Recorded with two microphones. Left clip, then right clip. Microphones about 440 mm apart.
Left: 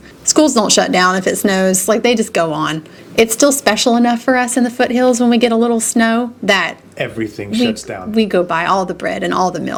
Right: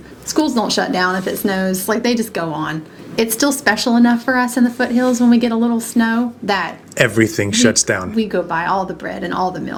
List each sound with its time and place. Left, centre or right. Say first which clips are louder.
0.3 s speech: left 6 dB; left
7.0 s speech: right 7 dB; right
8.1 s speech: left 4 dB; left